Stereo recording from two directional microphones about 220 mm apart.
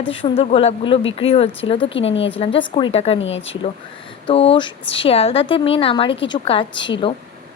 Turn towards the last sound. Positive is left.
turn(degrees=20)  # may be behind; listen again after turning